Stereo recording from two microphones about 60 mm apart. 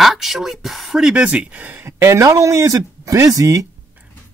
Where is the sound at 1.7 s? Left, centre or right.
Right.